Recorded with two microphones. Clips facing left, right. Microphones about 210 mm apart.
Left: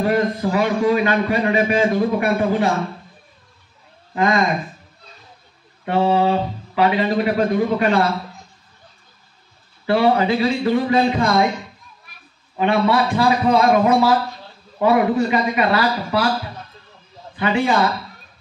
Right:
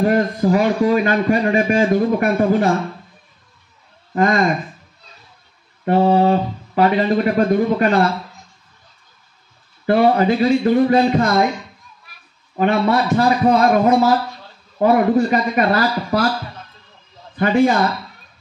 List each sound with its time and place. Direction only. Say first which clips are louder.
0.0 s a man's voice: right 2 dB; 45° right (ahead or behind)
4.1 s speech: right 2 dB; 45° right (ahead or behind)
5.9 s a man's voice: right 3 dB; 45° right (ahead or behind)
9.8 s a man's voice: right 2 dB; 45° right (ahead or behind)
12.5 s a man's voice: right 1 dB; 45° right (ahead or behind)
17.4 s a man's voice: right 4 dB; 45° right (ahead or behind)